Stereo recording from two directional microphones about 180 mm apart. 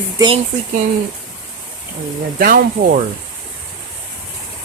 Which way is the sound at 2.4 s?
50° right (ahead or behind).